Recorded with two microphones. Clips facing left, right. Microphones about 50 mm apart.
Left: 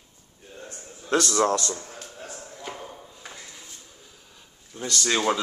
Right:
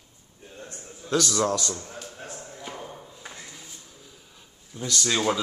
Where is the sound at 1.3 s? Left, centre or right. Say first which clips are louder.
Left 3 dB; left.